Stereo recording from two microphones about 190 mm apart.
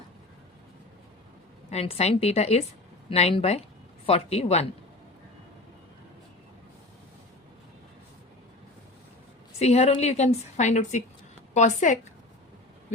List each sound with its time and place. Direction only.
1.7 s a woman's voice: 35° left (ahead or behind)
9.6 s a woman's voice: 35° left (ahead or behind)